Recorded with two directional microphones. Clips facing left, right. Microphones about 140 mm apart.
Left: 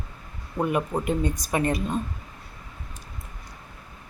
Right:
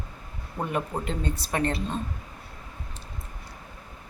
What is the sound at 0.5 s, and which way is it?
Speech, 15° left (ahead or behind).